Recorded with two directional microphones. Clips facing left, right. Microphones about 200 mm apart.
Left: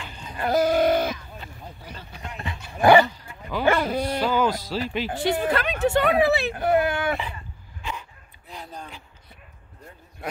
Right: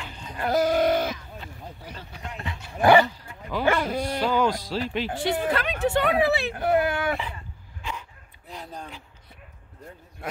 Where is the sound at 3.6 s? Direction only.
30° left (ahead or behind).